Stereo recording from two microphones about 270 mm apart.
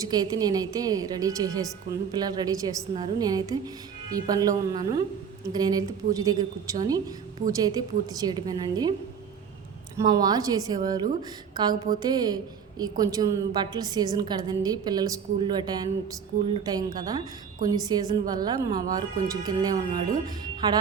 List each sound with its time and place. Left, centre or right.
0.0 s a woman's voice: centre
10.0 s a woman's voice: centre